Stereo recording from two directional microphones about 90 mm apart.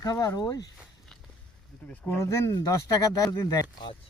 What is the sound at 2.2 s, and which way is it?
Speech, 35° left (ahead or behind).